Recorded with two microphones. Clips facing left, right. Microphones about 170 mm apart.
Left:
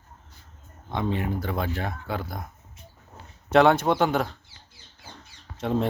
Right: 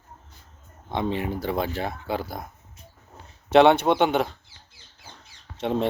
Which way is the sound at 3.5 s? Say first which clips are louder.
Right 2 dB; 25° right (ahead or behind).